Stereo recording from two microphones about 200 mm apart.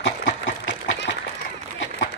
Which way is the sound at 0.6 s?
65° left (ahead or behind).